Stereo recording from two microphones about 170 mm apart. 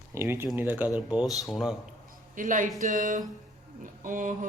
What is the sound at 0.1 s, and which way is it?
A man's voice, 15° right (ahead or behind).